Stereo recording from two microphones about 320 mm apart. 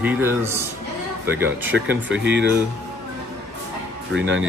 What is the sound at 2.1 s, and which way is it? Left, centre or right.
Speech, right.